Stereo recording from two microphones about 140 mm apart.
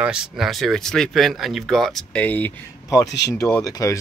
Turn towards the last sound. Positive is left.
turn(degrees=25)  # may be behind; listen again after turning